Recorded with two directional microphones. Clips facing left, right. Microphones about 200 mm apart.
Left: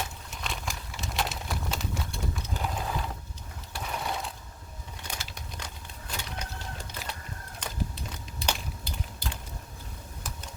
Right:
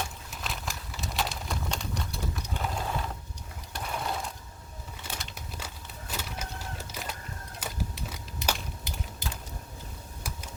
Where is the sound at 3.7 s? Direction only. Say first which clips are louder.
Even; centre (ahead or behind).